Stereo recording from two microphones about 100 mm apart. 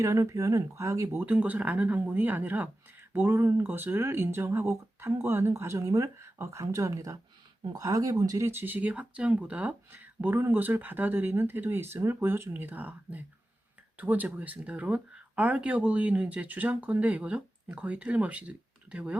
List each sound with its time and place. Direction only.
0.0 s speech: 30° right (ahead or behind)
8.4 s speech: 20° right (ahead or behind)